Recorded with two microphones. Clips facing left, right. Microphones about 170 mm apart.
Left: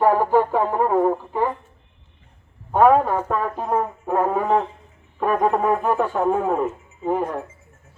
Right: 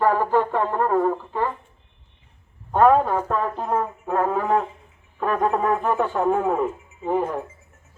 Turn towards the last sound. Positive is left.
turn(degrees=0)  # may be behind; listen again after turning